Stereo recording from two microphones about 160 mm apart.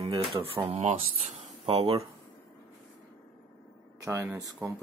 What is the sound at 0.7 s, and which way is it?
Speech, 40° right (ahead or behind).